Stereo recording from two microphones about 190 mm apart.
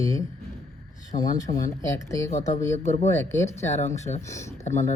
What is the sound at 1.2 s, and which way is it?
Speech, 15° left (ahead or behind).